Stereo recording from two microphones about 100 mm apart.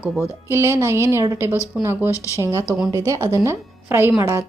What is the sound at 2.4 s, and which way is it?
A woman's voice, 30° right (ahead or behind).